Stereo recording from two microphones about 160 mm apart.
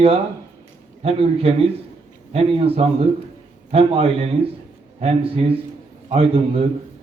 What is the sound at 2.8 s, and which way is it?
A man's voice, 40° right (ahead or behind).